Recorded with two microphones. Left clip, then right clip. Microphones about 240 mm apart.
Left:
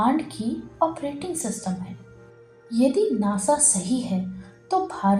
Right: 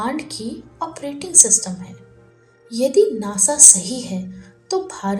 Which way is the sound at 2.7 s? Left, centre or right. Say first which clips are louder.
Right 6 dB; right.